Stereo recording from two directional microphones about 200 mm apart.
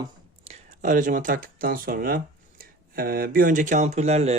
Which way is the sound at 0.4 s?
35° right (ahead or behind).